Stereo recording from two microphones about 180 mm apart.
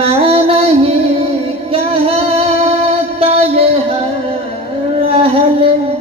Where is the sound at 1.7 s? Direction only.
30° right (ahead or behind).